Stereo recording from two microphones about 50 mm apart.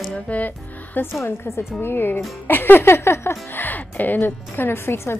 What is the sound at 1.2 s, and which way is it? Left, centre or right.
Speech, left.